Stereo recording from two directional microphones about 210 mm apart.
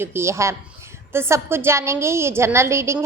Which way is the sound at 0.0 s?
10° right (ahead or behind).